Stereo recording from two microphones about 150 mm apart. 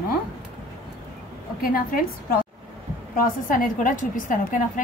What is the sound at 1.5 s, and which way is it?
Speech, 70° left (ahead or behind).